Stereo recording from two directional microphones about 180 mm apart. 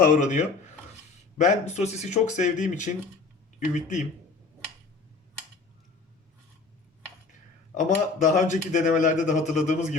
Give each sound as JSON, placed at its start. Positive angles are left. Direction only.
{"t": 0.0, "sound": "speech", "side_deg": 45}
{"t": 7.7, "sound": "speech", "side_deg": 45}